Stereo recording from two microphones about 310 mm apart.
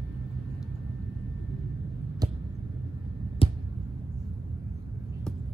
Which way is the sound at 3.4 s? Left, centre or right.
Centre.